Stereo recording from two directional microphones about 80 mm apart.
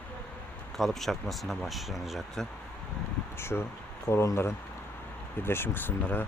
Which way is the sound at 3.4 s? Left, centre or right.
Left.